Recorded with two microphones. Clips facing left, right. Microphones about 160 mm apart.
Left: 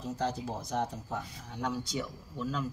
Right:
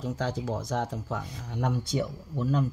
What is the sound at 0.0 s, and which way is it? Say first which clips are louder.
Speech: right 3 dB; 90° right.